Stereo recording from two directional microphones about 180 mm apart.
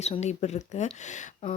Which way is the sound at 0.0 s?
40° left (ahead or behind).